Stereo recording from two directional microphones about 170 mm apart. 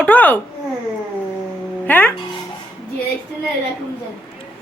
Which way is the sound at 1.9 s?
10° left (ahead or behind).